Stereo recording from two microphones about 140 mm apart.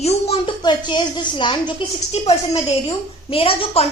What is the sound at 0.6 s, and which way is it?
Speech, 35° left (ahead or behind).